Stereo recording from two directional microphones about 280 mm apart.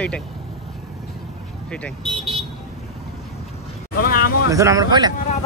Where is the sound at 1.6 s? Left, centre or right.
Centre.